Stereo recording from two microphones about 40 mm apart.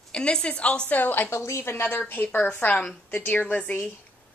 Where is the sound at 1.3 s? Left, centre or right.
Left.